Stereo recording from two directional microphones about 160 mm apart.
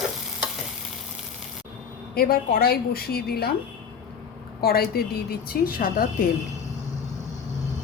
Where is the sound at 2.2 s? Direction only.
70° left (ahead or behind).